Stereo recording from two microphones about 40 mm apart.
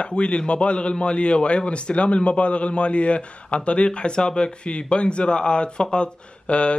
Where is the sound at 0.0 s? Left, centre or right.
Left.